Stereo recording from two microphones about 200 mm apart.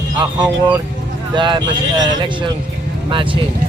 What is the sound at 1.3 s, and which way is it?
Speech, 25° right (ahead or behind).